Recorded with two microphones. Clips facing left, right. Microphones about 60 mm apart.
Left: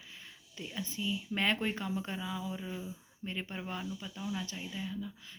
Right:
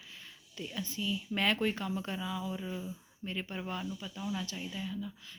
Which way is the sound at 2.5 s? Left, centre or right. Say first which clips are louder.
Right 1 dB; centre.